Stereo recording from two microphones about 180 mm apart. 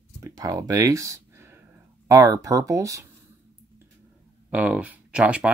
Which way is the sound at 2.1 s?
15° right (ahead or behind).